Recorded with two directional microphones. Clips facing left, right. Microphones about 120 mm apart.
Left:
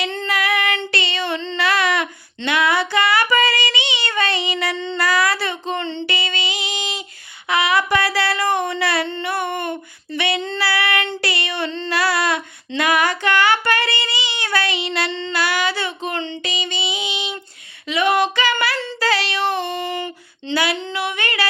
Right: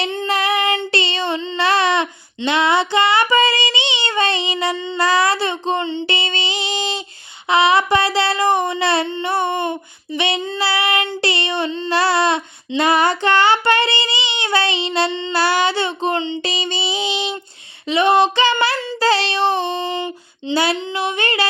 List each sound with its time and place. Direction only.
0.3 s child singing: 25° right (ahead or behind)
4.9 s child singing: 25° right (ahead or behind)
6.1 s music: 25° right (ahead or behind)
7.4 s a sound: 25° right (ahead or behind)
9.0 s female singing: 20° right (ahead or behind)
10.6 s child singing: 20° right (ahead or behind)
11.2 s female singing: 25° right (ahead or behind)
11.9 s child singing: 25° right (ahead or behind)
16.4 s music: 30° right (ahead or behind)
17.8 s female singing: 25° right (ahead or behind)